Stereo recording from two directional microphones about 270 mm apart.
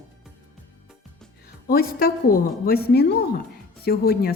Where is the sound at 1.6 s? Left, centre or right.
Left.